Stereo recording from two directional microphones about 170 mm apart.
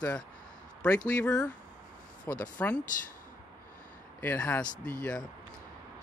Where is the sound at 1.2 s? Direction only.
5° left (ahead or behind).